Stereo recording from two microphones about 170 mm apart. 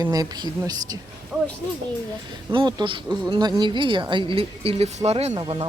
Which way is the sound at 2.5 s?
25° right (ahead or behind).